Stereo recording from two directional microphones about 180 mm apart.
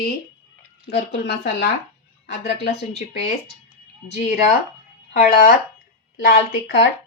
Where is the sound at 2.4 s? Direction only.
65° left (ahead or behind).